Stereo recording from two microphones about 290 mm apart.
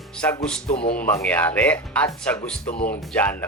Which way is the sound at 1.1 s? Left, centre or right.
Centre.